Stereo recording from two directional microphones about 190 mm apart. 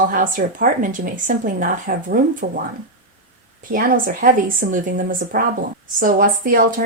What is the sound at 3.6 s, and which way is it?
Speech, 45° right (ahead or behind).